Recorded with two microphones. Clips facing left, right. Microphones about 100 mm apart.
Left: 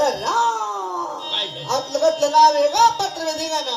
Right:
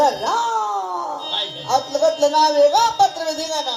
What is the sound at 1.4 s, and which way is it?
Speech, 35° left (ahead or behind).